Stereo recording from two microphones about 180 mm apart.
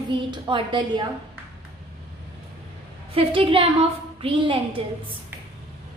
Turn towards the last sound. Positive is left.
turn(degrees=-30)  # may be behind; listen again after turning